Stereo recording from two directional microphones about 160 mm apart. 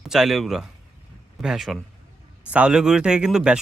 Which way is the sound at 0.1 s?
Centre (ahead or behind).